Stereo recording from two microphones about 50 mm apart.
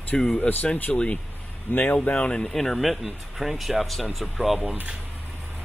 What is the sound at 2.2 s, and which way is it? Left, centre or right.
Speech, centre.